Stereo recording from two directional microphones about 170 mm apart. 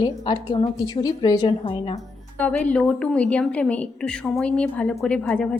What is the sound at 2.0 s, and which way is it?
A woman's voice, 5° left (ahead or behind).